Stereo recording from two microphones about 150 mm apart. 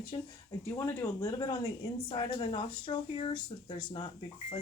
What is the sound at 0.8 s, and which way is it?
Speech, 20° left (ahead or behind).